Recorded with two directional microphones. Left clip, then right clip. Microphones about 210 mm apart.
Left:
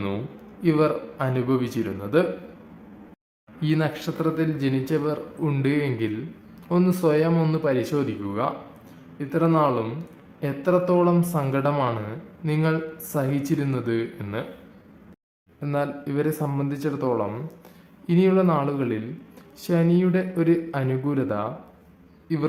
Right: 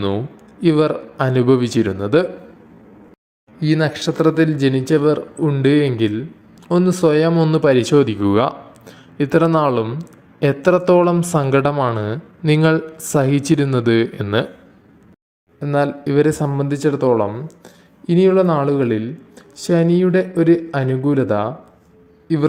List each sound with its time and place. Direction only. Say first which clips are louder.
0.6 s speech: right 6 dB; 30° right (ahead or behind)
3.6 s speech: right 7 dB; 25° right (ahead or behind)
5.5 s speech: right 9 dB; 15° right (ahead or behind)
5.7 s a man's voice: right 9 dB; 25° right (ahead or behind)
15.6 s speech: right 9 dB; 25° right (ahead or behind)